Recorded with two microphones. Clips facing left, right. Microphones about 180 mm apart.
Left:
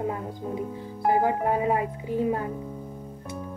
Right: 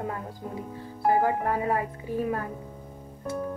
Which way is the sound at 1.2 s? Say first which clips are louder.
Left 2 dB; 20° left (ahead or behind).